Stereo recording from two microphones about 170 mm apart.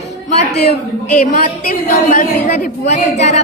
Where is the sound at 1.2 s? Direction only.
55° left (ahead or behind).